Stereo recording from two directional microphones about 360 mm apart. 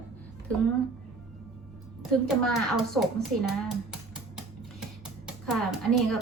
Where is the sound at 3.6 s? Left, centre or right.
Centre.